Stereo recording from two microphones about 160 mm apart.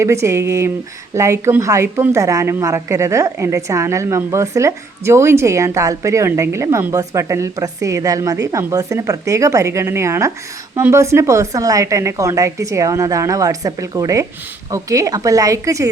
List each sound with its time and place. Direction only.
0.0 s a woman's voice: 15° right (ahead or behind)